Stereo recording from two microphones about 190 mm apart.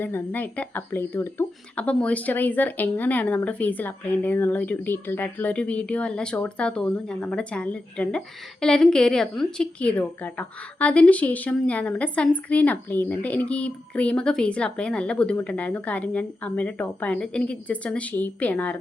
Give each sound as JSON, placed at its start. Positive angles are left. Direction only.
{"t": 0.0, "sound": "a woman's voice", "side_deg": 10}